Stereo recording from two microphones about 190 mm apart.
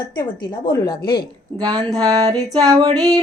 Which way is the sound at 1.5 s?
20° right (ahead or behind).